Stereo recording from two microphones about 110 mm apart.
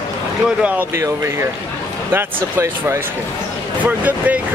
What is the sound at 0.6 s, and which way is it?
Speech, 15° right (ahead or behind).